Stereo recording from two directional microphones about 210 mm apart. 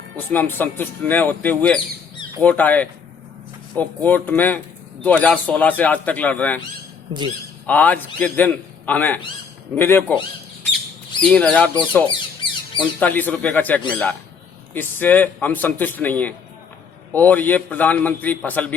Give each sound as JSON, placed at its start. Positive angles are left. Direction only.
{"t": 0.3, "sound": "a man's voice", "side_deg": 10}
{"t": 7.7, "sound": "a man's voice", "side_deg": 5}
{"t": 11.2, "sound": "speech", "side_deg": 5}
{"t": 12.1, "sound": "a sound", "side_deg": 25}
{"t": 13.0, "sound": "a man's voice", "side_deg": 10}